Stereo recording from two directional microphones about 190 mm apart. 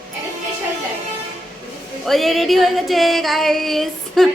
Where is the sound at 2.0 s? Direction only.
Centre (ahead or behind).